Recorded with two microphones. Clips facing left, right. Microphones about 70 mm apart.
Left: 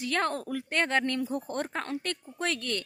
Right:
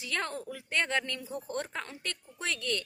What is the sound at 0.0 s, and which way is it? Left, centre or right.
A woman's voice, left.